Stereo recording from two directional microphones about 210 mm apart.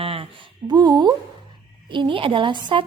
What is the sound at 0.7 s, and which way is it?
A woman's voice, 20° right (ahead or behind).